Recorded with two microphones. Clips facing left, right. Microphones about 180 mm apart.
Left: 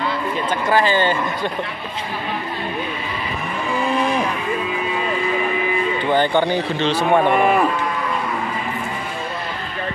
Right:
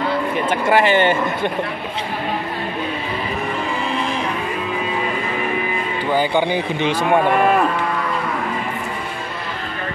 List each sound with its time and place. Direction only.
0.5 s speech: 25° right (ahead or behind)
6.1 s a man's voice: 10° right (ahead or behind)